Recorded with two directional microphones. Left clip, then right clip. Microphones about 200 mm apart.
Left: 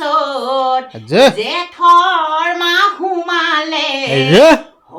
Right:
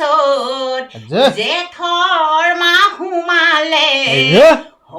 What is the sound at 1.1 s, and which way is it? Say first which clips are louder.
Speech: left 3 dB; 30° left (ahead or behind).